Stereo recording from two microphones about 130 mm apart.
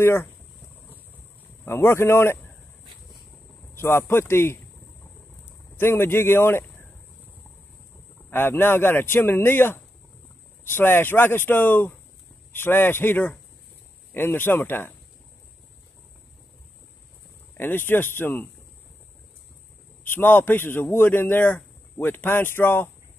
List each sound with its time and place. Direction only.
0.0 s speech: 20° left (ahead or behind)
1.6 s speech: 20° left (ahead or behind)
3.7 s speech: 20° left (ahead or behind)
5.4 s a sound: 20° left (ahead or behind)
8.3 s a man's voice: 15° left (ahead or behind)
17.6 s a man's voice: 15° left (ahead or behind)
20.1 s a man's voice: 15° left (ahead or behind)